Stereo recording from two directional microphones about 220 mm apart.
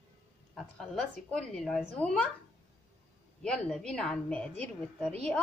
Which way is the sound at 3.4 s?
5° left (ahead or behind).